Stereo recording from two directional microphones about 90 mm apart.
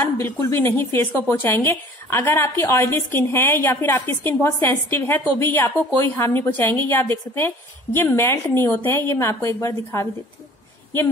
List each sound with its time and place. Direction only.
0.0 s a woman's voice: 25° left (ahead or behind)